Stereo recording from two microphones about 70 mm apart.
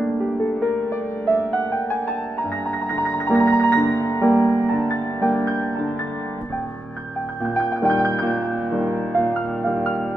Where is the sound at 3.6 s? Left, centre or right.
Left.